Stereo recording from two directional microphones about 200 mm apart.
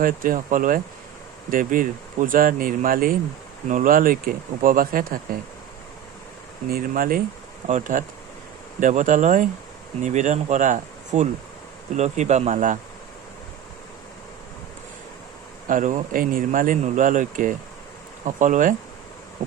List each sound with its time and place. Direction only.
0.0 s speech: 45° right (ahead or behind)
6.7 s speech: 45° right (ahead or behind)
15.6 s speech: 40° right (ahead or behind)